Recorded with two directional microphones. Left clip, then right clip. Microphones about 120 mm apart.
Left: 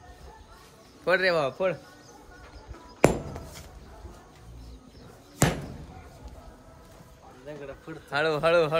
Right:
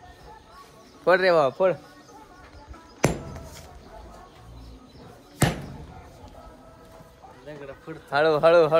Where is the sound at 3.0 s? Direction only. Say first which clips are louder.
Left 3 dB; 50° left (ahead or behind).